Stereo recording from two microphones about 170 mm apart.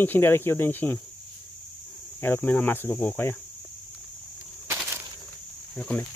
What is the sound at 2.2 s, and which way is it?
Cricket, 10° left (ahead or behind).